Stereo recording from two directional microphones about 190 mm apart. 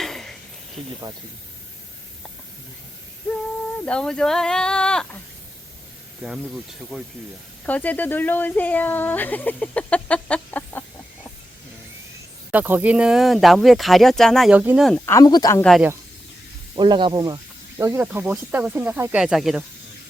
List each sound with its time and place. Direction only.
0.0 s a sound: centre (ahead or behind)
3.8 s speech: 5° left (ahead or behind)
6.9 s speech: centre (ahead or behind)
12.5 s speech: 10° right (ahead or behind)
14.8 s speech: 10° left (ahead or behind)
16.7 s speech: 25° right (ahead or behind); by 19.6 s 5° right (ahead or behind)